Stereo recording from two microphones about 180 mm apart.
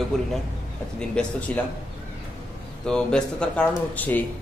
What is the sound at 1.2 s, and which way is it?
Speech, 5° left (ahead or behind).